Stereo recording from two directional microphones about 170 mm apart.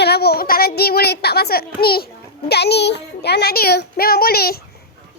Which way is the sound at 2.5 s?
75° left (ahead or behind).